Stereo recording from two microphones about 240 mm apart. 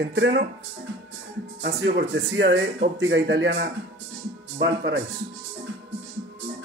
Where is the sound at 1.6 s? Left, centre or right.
Right.